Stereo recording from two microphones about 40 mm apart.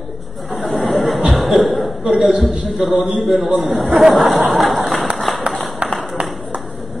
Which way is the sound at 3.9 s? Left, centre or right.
Centre.